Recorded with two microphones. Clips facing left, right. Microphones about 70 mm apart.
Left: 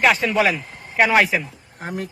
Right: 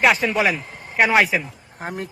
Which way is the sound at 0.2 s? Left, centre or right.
Centre.